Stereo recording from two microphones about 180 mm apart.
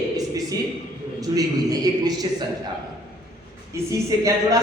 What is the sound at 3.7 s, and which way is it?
Speech, 20° right (ahead or behind).